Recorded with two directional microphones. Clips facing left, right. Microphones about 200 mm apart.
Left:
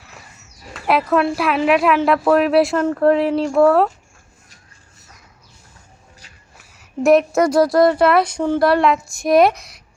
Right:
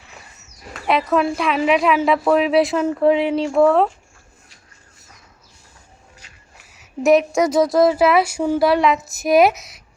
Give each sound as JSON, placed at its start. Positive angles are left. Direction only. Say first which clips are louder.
{"t": 0.7, "sound": "speech", "louder": "left 1 dB", "side_deg": 0}
{"t": 6.7, "sound": "speech", "louder": "left 1 dB", "side_deg": 0}